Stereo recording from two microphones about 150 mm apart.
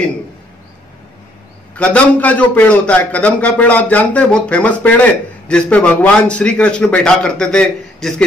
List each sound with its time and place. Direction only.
1.8 s a man's voice: 10° left (ahead or behind)